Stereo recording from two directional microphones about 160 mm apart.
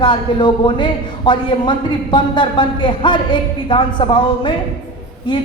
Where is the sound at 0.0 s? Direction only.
30° left (ahead or behind).